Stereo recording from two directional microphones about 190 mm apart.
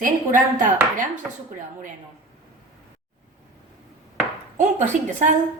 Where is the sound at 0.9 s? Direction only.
40° right (ahead or behind).